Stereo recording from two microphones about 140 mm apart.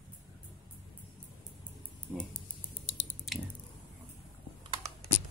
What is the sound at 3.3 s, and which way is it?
Squish, centre (ahead or behind).